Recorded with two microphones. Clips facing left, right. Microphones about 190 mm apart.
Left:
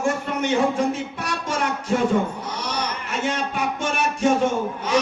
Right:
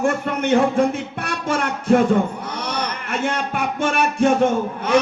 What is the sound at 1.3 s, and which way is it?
Music, 55° right (ahead or behind).